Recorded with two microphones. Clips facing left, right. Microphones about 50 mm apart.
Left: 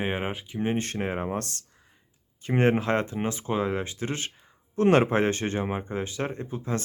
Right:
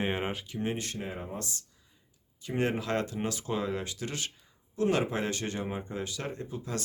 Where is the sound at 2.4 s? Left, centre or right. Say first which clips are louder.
Left 7 dB; left.